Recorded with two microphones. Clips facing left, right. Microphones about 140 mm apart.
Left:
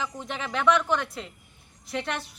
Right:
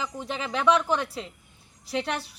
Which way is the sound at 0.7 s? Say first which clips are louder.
Right 1 dB; 35° right (ahead or behind).